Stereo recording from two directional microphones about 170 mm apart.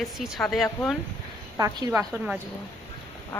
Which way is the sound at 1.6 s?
20° right (ahead or behind).